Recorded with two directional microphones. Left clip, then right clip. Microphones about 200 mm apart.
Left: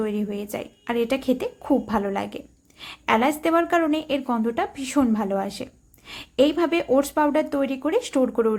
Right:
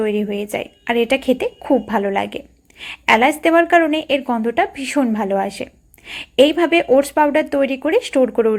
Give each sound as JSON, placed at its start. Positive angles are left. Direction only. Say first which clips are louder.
{"t": 0.0, "sound": "a woman's voice", "louder": "right 8 dB", "side_deg": -5}